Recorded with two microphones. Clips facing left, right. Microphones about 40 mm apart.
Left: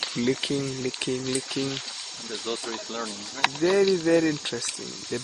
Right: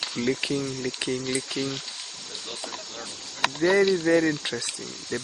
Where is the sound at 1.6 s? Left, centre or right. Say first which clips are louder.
Left 1 dB; right.